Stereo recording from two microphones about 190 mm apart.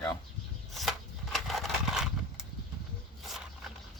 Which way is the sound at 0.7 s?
Centre (ahead or behind).